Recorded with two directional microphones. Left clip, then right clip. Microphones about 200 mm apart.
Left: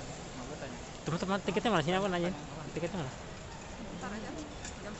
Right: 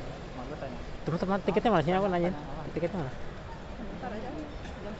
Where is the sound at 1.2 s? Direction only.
5° left (ahead or behind).